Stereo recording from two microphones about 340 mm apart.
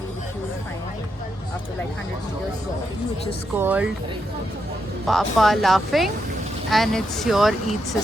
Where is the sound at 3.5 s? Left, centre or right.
Centre.